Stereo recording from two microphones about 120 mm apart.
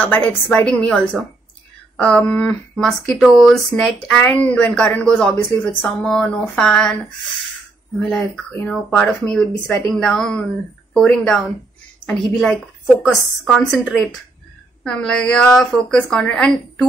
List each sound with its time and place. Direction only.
0.0 s a woman's voice: 10° left (ahead or behind)
5.3 s a woman's voice: 15° left (ahead or behind)
8.0 s a woman's voice: 5° left (ahead or behind)